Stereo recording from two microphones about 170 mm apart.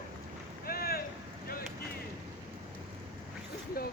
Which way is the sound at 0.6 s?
60° left (ahead or behind).